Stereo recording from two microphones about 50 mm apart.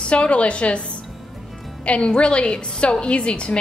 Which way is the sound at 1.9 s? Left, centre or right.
Left.